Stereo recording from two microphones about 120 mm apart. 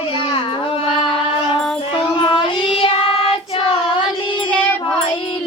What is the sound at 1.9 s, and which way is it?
Child singing, 45° left (ahead or behind).